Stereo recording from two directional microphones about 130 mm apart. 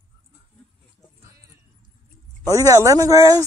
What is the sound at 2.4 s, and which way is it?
Speech, 25° right (ahead or behind).